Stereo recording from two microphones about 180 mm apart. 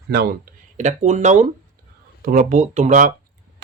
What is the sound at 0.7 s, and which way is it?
Speech, 40° right (ahead or behind).